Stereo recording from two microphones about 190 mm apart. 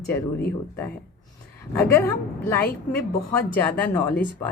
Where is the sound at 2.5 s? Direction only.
10° left (ahead or behind).